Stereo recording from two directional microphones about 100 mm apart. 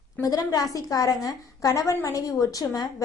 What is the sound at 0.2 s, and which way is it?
A woman's voice, 35° left (ahead or behind).